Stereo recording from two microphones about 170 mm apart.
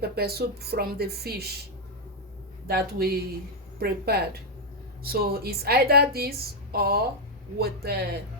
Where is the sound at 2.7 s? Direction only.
65° right (ahead or behind).